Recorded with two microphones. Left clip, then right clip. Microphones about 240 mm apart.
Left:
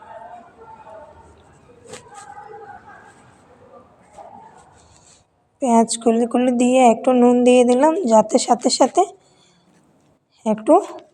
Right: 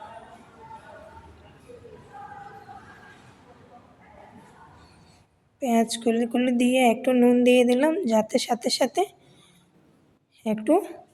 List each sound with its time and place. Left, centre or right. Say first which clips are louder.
5.5 s a woman's voice: left 7 dB; centre
10.4 s a woman's voice: left 8 dB; centre